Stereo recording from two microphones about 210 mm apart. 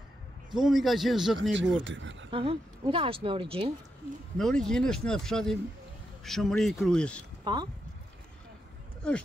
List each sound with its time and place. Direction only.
0.5 s speech: centre (ahead or behind)
1.9 s speech: 60° right (ahead or behind)
2.3 s speech: 25° right (ahead or behind)
4.4 s speech: centre (ahead or behind)
7.5 s speech: 20° right (ahead or behind)